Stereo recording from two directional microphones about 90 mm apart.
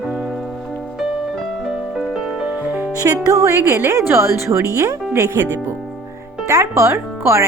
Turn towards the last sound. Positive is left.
turn(degrees=-30)  # may be behind; listen again after turning